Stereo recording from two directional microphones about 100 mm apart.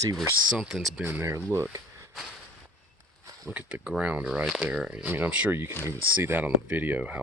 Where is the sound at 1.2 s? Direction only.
25° right (ahead or behind).